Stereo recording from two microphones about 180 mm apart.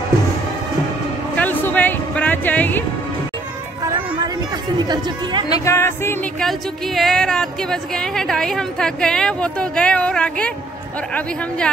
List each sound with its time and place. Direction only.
1.3 s a sound: 10° left (ahead or behind)
4.7 s speech: 25° right (ahead or behind)
5.5 s speech: 15° left (ahead or behind)
6.4 s a woman's voice: centre (ahead or behind)